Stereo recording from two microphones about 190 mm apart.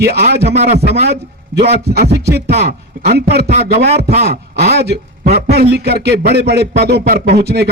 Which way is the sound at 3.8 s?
55° right (ahead or behind).